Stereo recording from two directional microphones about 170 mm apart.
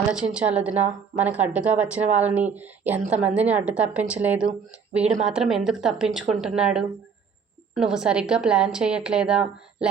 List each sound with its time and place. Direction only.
0.1 s a woman's voice: 5° right (ahead or behind)